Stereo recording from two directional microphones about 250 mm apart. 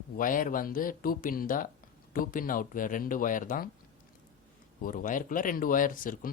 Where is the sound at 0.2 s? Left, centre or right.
Left.